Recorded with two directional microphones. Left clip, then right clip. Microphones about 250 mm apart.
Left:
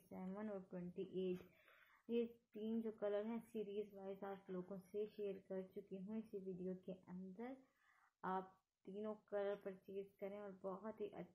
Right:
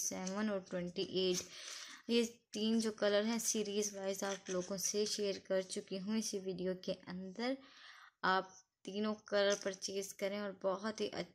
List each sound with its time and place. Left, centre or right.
0.1 s speech: right